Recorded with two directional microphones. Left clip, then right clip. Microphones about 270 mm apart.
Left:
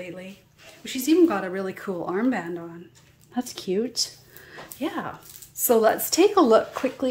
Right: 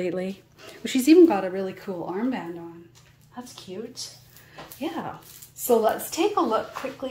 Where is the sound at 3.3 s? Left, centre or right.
Left.